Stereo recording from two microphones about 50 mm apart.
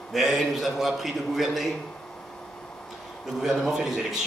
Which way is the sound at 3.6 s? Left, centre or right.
Centre.